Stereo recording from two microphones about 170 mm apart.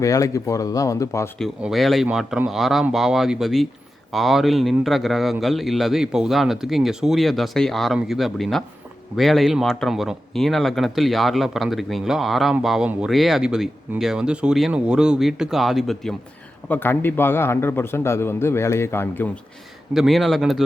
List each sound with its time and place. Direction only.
0.0 s speech: 20° left (ahead or behind)
1.4 s speech: centre (ahead or behind)
16.6 s a man's voice: 10° left (ahead or behind)
19.9 s speech: centre (ahead or behind)